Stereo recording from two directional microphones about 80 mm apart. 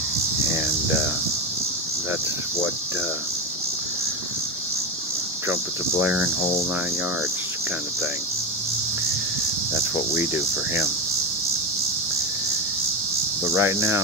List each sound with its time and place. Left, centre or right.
10.1 s cricket: right
13.6 s cricket: right